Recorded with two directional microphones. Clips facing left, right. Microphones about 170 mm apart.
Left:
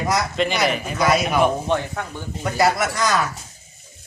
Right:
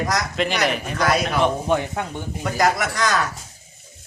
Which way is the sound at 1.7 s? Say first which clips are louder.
Right 1 dB; 15° right (ahead or behind).